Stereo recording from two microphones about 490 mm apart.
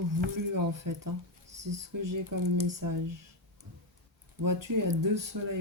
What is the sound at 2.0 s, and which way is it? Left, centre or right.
Speech, right.